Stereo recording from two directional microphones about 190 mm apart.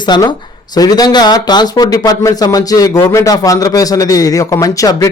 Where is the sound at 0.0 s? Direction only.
25° left (ahead or behind).